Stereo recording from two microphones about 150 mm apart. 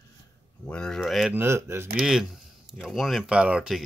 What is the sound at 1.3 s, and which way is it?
Speech, 15° right (ahead or behind).